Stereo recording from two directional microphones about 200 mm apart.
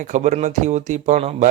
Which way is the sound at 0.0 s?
35° right (ahead or behind).